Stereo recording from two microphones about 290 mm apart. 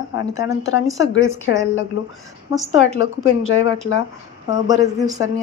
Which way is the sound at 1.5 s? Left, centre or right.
Left.